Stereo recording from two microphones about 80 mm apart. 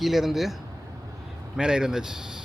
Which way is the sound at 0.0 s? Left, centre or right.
Centre.